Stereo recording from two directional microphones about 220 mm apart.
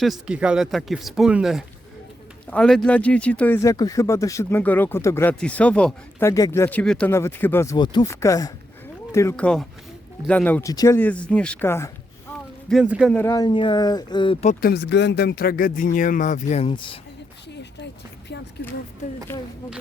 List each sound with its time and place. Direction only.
0.0 s speech: centre (ahead or behind)
12.6 s speech: 5° right (ahead or behind)
13.1 s speech: 15° left (ahead or behind)
14.4 s speech: 45° left (ahead or behind); by 17.0 s 25° left (ahead or behind)
19.3 s speech: 10° left (ahead or behind)